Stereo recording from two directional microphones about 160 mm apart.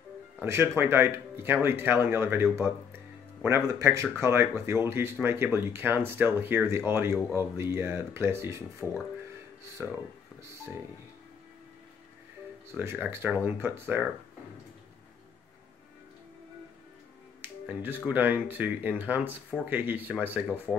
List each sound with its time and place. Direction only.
0.4 s speech: 15° right (ahead or behind)
3.4 s speech: 15° right (ahead or behind)
9.8 s speech: 10° right (ahead or behind)
12.7 s speech: 10° right (ahead or behind)
17.4 s speech: 10° right (ahead or behind)